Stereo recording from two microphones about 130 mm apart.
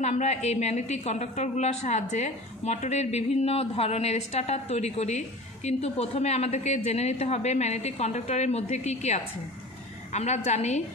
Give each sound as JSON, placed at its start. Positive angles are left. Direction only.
{"t": 0.0, "sound": "a woman's voice", "side_deg": 60}